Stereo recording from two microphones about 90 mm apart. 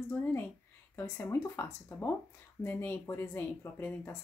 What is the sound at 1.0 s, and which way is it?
Speech, 30° left (ahead or behind).